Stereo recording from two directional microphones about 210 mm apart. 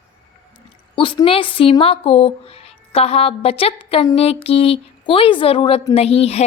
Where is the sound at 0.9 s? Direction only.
25° left (ahead or behind).